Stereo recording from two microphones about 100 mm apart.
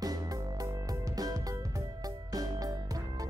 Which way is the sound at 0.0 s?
40° right (ahead or behind).